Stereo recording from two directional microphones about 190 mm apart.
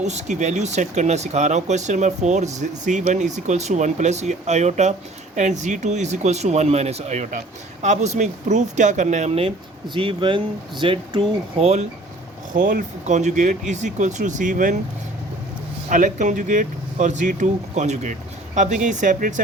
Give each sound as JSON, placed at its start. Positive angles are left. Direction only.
{"t": 0.0, "sound": "speech", "side_deg": -35}
{"t": 12.5, "sound": "speech", "side_deg": -45}
{"t": 15.9, "sound": "speech", "side_deg": -40}